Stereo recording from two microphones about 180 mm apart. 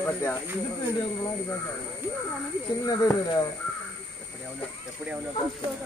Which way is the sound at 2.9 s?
20° left (ahead or behind).